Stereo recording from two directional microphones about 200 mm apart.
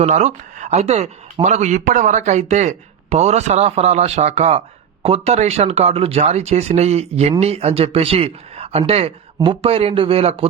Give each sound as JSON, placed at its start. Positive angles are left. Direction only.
{"t": 0.0, "sound": "speech", "side_deg": -35}